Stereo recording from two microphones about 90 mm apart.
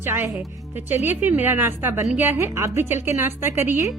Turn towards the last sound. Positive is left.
turn(degrees=-25)  # may be behind; listen again after turning